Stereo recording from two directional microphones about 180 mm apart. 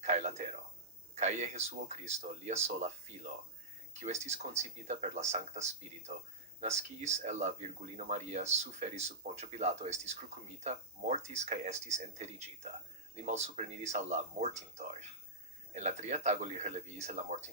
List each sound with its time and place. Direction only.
0.0 s a sound: 40° right (ahead or behind)
1.1 s speech: 40° right (ahead or behind)
4.0 s speech: 40° right (ahead or behind)